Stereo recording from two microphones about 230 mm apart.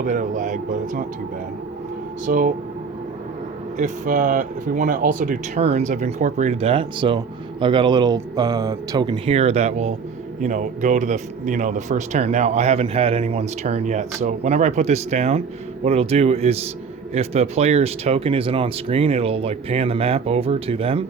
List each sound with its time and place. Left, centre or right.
0.0 s speech: right
2.2 s speech: right
3.8 s speech: right